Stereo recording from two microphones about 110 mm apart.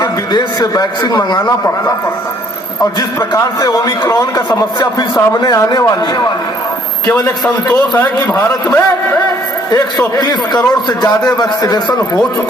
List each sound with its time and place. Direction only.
0.0 s a man's voice: 35° left (ahead or behind)
3.2 s a man's voice: 30° left (ahead or behind)
7.7 s a man's voice: 20° left (ahead or behind)
9.7 s a man's voice: 35° left (ahead or behind)